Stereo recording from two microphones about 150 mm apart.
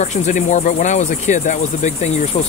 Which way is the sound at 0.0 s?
55° left (ahead or behind).